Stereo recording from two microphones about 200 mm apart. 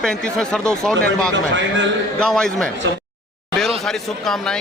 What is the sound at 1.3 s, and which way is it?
Speech, 65° right (ahead or behind).